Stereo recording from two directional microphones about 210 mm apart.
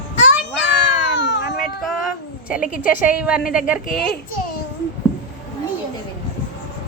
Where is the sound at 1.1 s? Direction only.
60° left (ahead or behind).